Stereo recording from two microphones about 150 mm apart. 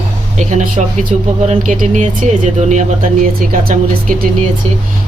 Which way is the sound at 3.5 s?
70° right (ahead or behind).